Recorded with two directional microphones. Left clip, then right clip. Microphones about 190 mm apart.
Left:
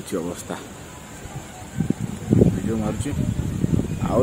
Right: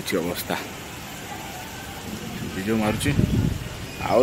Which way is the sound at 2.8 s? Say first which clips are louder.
Right 4 dB; centre (ahead or behind).